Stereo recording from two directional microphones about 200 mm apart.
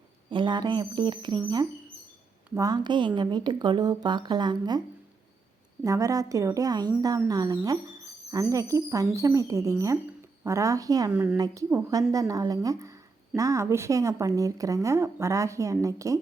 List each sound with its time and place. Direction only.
0.3 s speech: 20° right (ahead or behind)
2.6 s speech: 20° right (ahead or behind)
5.8 s a woman's voice: 15° right (ahead or behind)
11.1 s a woman's voice: 5° right (ahead or behind)